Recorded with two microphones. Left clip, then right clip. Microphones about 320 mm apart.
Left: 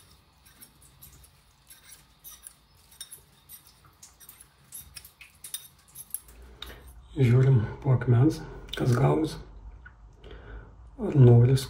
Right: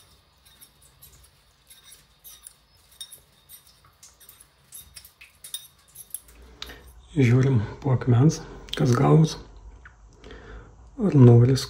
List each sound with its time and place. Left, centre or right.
7.2 s speech: right
11.1 s speech: right